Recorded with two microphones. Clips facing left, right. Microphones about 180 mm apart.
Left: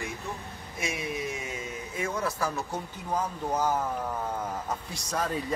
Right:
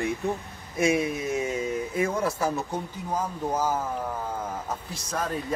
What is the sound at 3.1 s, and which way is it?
Speech, 5° right (ahead or behind).